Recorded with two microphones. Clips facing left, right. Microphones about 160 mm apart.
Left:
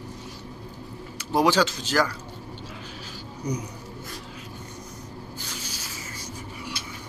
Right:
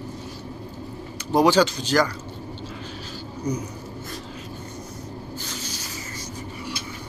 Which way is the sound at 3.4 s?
15° left (ahead or behind).